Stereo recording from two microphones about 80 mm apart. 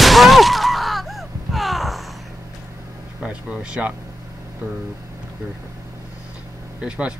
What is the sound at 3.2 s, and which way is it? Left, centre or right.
Speech, centre.